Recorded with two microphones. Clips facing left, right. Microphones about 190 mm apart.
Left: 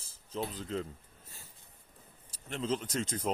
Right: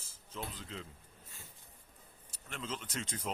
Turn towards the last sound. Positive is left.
turn(degrees=40)  # may be behind; listen again after turning